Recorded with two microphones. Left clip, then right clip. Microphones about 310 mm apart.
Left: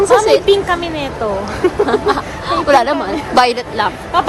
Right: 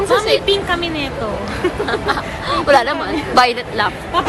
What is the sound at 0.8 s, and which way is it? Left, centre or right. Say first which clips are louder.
Speech: left 1 dB; left.